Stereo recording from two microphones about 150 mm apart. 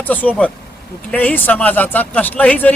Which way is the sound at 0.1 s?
10° left (ahead or behind).